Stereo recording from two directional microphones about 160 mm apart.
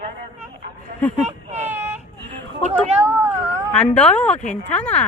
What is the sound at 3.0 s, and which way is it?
Cat, 10° right (ahead or behind).